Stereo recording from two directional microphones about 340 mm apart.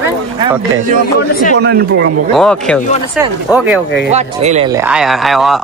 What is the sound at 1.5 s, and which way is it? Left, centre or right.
Speech, right.